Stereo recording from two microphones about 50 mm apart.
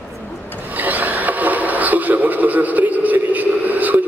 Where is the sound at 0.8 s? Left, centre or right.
Right.